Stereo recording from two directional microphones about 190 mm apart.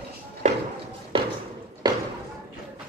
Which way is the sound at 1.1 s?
30° right (ahead or behind).